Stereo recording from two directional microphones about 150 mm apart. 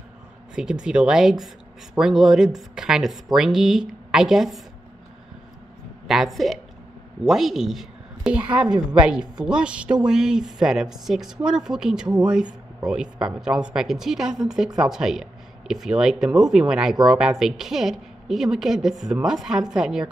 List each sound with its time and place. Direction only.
0.6 s speech: 5° right (ahead or behind)
6.0 s a woman's voice: centre (ahead or behind)